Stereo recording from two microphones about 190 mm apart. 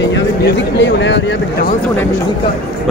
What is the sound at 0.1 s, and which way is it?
Speech, 70° left (ahead or behind).